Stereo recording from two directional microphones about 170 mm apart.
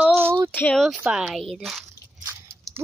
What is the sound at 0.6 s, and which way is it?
Speech, 5° left (ahead or behind).